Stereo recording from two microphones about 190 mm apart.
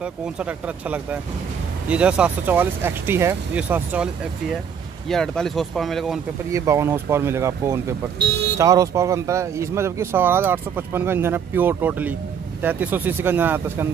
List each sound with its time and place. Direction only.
0.0 s speech: 5° right (ahead or behind)
6.5 s speech: 15° right (ahead or behind)
8.2 s speech: 60° right (ahead or behind)
8.5 s speech: 15° right (ahead or behind)